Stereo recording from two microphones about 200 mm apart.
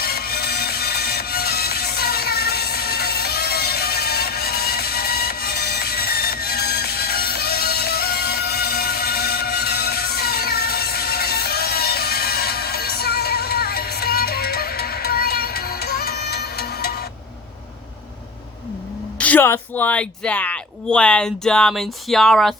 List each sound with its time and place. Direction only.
0.0 s music: 50° left (ahead or behind)
19.2 s a woman's voice: 10° left (ahead or behind)